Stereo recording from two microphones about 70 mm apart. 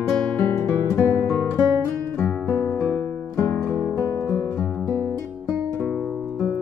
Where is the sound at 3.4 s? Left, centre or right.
Left.